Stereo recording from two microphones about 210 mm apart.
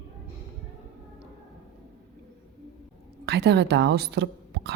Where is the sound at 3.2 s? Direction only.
55° right (ahead or behind).